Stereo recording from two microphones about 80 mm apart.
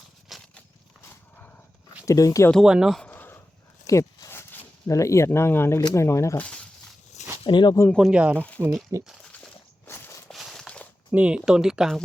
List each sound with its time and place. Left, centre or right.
0.3 s a sound: centre
2.0 s speech: left
2.6 s speech: centre
3.0 s a sound: left
3.8 s a sound: left
4.9 s speech: left
6.3 s speech: centre
7.4 s speech: left
8.1 s speech: centre
8.6 s speech: right
9.8 s walk: left
10.3 s walk: centre
11.1 s speech: centre